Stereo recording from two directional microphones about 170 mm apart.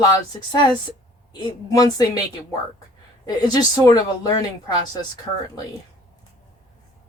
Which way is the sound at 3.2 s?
25° left (ahead or behind).